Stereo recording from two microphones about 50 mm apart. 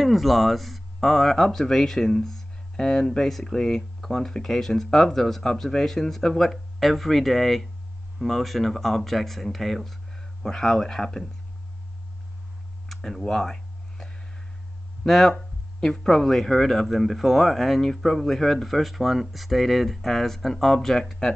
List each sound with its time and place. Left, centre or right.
0.0 s speech: centre
12.8 s a sound: centre
15.0 s speech: centre